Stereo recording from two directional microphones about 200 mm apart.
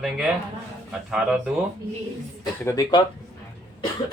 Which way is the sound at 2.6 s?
15° left (ahead or behind).